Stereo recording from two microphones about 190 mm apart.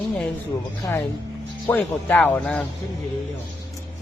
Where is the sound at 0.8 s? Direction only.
15° left (ahead or behind).